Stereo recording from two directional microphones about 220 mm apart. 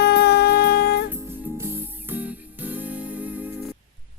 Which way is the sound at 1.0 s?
10° right (ahead or behind).